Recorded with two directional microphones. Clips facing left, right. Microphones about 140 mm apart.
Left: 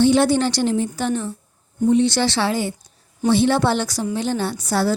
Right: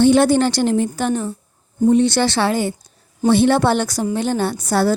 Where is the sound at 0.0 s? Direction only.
55° right (ahead or behind).